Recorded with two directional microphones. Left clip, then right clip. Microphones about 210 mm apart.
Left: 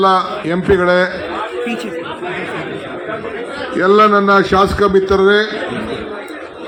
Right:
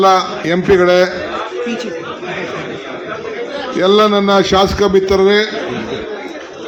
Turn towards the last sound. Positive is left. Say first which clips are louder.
# even
turn(degrees=-30)  # may be behind; listen again after turning